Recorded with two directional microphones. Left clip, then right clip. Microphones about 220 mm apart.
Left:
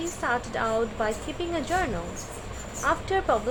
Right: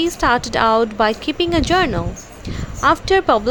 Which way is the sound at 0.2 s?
30° right (ahead or behind).